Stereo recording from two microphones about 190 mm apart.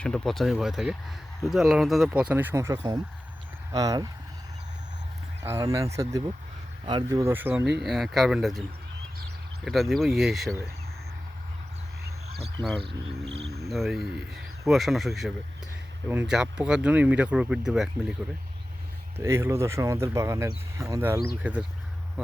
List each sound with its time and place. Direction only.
0.0 s speech: 5° left (ahead or behind); by 4.1 s 20° right (ahead or behind)
5.4 s speech: 15° right (ahead or behind)
9.6 s speech: centre (ahead or behind)
13.7 s speech: centre (ahead or behind)
19.1 s speech: 15° right (ahead or behind)